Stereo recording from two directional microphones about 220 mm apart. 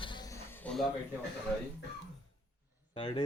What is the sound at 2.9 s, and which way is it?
Speech, 20° left (ahead or behind).